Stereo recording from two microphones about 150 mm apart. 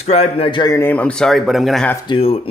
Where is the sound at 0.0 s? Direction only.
45° left (ahead or behind).